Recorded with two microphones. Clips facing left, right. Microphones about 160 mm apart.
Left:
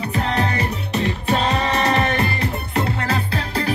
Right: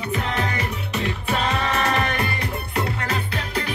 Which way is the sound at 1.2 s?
35° left (ahead or behind).